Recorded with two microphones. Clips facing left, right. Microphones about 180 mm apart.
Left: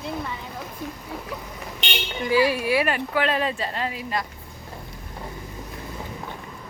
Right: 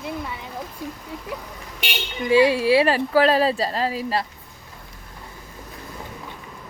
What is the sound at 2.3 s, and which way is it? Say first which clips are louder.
Speech: right 5 dB; 25° right (ahead or behind).